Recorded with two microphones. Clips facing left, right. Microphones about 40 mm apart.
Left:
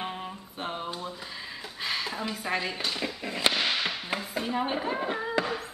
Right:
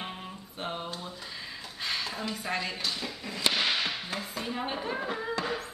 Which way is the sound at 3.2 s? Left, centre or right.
Left.